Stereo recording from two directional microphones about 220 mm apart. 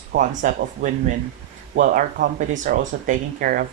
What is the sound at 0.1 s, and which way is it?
Speech, 35° right (ahead or behind).